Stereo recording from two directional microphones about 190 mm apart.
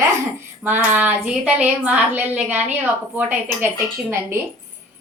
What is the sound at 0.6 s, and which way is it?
A woman's voice, 10° right (ahead or behind).